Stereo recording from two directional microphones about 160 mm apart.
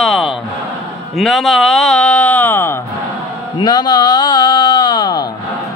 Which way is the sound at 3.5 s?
25° left (ahead or behind).